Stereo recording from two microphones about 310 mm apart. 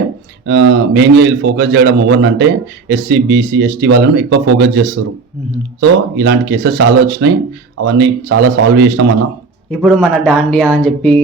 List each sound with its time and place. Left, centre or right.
0.4 s a man's voice: right
6.1 s a man's voice: right
9.8 s speech: centre